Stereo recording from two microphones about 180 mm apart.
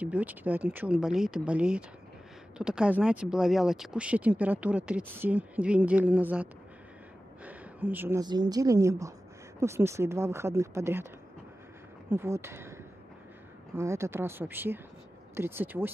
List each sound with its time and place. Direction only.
0.0 s speech: 10° right (ahead or behind)
7.4 s a sound: 10° right (ahead or behind)
8.2 s a woman's voice: 20° right (ahead or behind)
12.1 s speech: 15° right (ahead or behind)
13.7 s speech: 15° right (ahead or behind)